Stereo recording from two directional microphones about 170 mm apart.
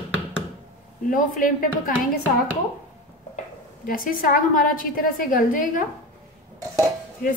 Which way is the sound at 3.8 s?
55° left (ahead or behind).